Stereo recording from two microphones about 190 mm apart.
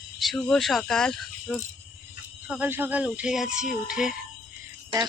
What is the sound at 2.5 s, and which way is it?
Speech, 10° right (ahead or behind).